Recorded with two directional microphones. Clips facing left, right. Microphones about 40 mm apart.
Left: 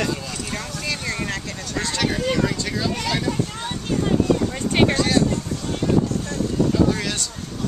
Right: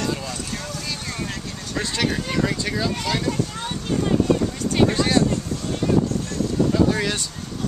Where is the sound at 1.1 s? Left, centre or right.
Left.